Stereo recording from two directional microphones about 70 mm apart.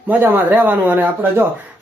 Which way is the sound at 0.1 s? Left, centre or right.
Right.